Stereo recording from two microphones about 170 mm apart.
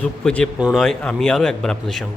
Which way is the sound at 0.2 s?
5° left (ahead or behind).